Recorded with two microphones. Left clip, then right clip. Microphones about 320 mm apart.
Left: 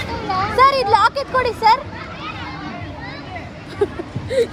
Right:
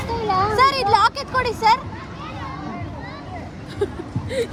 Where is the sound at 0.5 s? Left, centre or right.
Centre.